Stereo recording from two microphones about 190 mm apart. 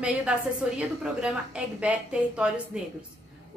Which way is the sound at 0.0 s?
5° right (ahead or behind).